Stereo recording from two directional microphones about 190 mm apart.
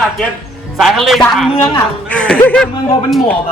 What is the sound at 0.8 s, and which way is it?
Speech, centre (ahead or behind).